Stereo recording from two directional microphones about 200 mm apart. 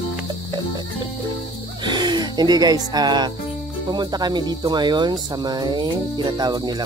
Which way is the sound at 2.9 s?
20° right (ahead or behind).